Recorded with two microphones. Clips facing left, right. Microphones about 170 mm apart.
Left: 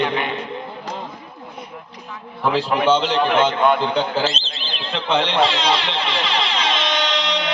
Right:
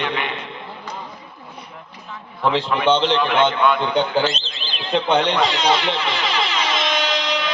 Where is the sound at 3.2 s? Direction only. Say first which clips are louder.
Left 1 dB; 40° left (ahead or behind).